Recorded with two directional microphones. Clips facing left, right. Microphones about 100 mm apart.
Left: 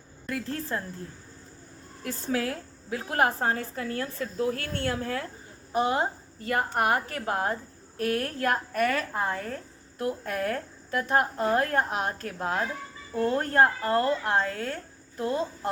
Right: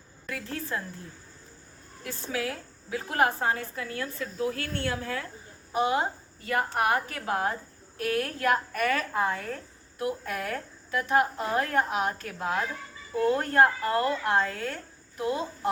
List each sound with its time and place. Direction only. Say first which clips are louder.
0.3 s a woman's voice: left 3 dB; 40° left (ahead or behind)
2.0 s a woman's voice: left 3 dB; 35° left (ahead or behind)